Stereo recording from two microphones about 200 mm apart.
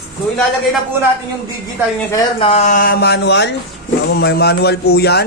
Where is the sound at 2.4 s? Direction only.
30° left (ahead or behind).